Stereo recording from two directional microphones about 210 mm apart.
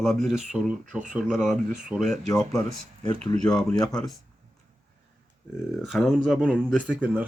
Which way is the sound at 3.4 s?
5° left (ahead or behind).